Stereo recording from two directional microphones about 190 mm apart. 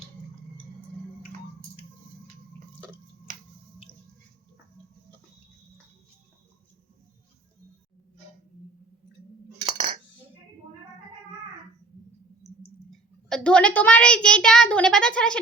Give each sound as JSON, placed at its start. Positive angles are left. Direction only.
{"t": 3.3, "sound": "finger snapping", "side_deg": -45}
{"t": 9.7, "sound": "cutlery", "side_deg": -30}
{"t": 12.4, "sound": "a sound", "side_deg": 15}
{"t": 12.9, "sound": "a child's voice", "side_deg": 0}